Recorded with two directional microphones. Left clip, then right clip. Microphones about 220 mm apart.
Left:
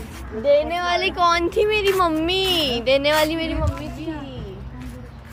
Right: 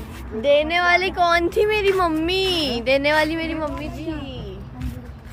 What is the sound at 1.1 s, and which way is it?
Speech, 20° right (ahead or behind).